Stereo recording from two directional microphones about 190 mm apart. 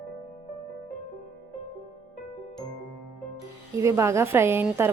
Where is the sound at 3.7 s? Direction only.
15° right (ahead or behind).